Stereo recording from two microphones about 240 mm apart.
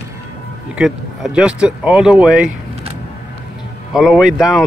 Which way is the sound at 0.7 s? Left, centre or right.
Centre.